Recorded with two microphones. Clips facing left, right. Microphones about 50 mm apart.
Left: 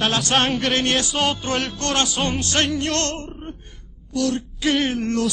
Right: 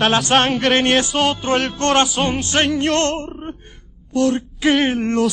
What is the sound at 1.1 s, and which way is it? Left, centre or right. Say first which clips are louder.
Speech: right 4 dB; centre.